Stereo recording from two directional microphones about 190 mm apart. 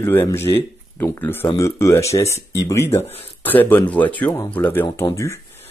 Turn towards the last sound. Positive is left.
turn(degrees=15)  # may be behind; listen again after turning